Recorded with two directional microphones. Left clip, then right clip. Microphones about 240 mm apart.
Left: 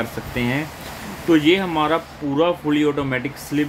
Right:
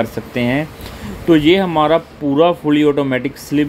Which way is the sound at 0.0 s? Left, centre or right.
Right.